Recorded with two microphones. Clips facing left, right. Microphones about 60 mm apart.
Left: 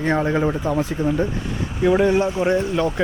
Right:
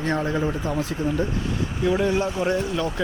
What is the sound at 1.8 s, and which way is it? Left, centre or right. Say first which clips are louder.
Speech: left 6 dB; left.